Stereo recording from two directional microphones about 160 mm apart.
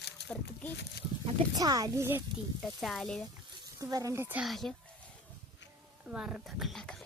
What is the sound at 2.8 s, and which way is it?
Speech, centre (ahead or behind).